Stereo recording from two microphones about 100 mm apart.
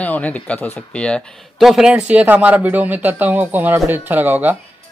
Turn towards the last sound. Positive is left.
turn(degrees=-15)  # may be behind; listen again after turning